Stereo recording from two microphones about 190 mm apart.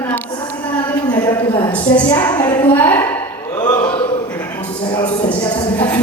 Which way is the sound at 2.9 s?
10° left (ahead or behind).